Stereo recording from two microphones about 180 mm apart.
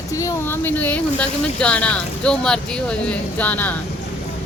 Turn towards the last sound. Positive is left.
turn(degrees=10)  # may be behind; listen again after turning